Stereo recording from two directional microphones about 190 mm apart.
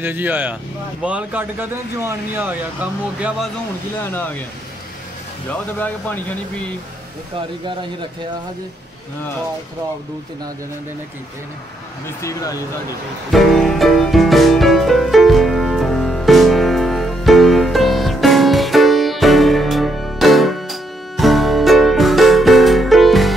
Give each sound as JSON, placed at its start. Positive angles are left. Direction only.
{"t": 0.0, "sound": "speech", "side_deg": -10}
{"t": 4.0, "sound": "speech", "side_deg": 10}
{"t": 5.5, "sound": "speech", "side_deg": 10}
{"t": 12.2, "sound": "speech", "side_deg": 15}
{"t": 13.3, "sound": "music", "side_deg": 0}